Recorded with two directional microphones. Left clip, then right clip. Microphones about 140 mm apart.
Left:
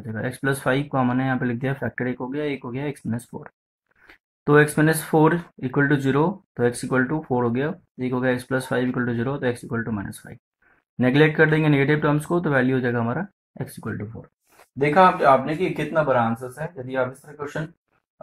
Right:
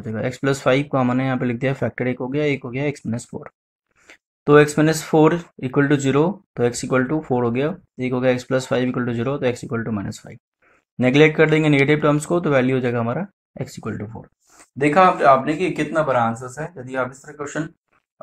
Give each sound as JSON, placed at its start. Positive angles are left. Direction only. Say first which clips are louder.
{"t": 0.0, "sound": "speech", "louder": "right 3 dB", "side_deg": -20}
{"t": 14.8, "sound": "speech", "louder": "right 2 dB", "side_deg": -30}